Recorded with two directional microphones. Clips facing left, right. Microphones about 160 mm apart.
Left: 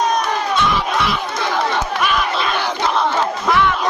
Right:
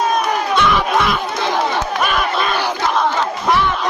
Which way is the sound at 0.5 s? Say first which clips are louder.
Right 4 dB; 60° right (ahead or behind).